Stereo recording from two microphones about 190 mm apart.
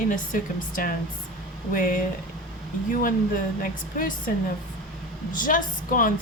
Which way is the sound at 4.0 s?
45° left (ahead or behind).